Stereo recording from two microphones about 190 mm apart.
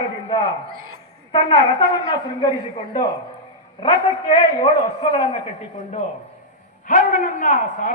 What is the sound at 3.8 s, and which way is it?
Speech, 30° left (ahead or behind).